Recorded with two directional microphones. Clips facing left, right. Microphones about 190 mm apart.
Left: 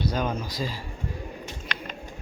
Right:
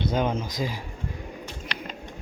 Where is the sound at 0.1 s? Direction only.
20° right (ahead or behind).